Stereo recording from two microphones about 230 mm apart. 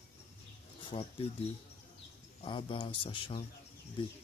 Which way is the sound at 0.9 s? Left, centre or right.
Left.